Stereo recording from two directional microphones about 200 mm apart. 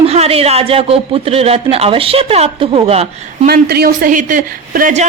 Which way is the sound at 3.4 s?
50° right (ahead or behind).